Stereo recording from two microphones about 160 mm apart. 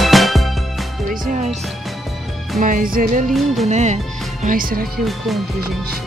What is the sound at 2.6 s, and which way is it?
Music, 60° right (ahead or behind).